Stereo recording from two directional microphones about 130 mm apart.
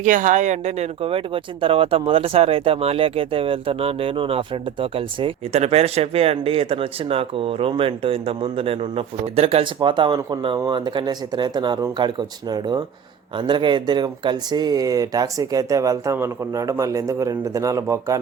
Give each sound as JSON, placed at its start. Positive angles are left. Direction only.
{"t": 0.0, "sound": "speech", "side_deg": -75}
{"t": 9.9, "sound": "speech", "side_deg": -35}